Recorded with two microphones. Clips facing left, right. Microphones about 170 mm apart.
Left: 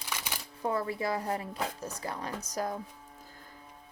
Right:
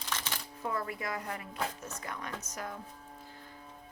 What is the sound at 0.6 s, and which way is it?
Speech, 30° left (ahead or behind).